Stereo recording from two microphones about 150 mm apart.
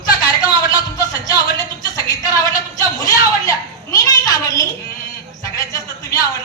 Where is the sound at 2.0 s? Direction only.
25° left (ahead or behind).